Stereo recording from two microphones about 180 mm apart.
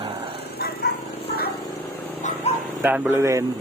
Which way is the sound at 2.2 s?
40° left (ahead or behind).